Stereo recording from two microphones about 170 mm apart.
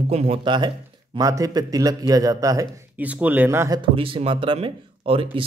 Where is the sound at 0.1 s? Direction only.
40° right (ahead or behind); by 2.7 s 20° right (ahead or behind).